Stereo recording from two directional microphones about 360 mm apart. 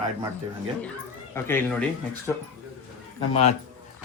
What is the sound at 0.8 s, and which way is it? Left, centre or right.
Speech, centre.